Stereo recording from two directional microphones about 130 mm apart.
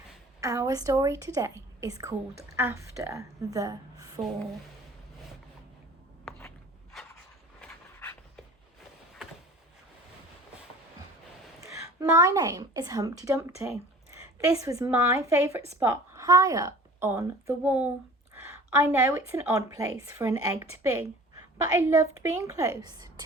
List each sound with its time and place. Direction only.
0.3 s a woman's voice: 25° right (ahead or behind)
11.6 s a woman's voice: 25° right (ahead or behind)